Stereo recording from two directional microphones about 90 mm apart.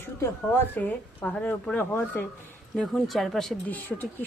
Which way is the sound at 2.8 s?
Centre (ahead or behind).